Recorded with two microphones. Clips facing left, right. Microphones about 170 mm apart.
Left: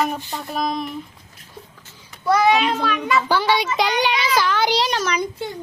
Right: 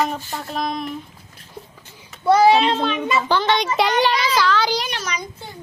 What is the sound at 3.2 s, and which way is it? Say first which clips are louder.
A woman's voice: even; 10° left (ahead or behind).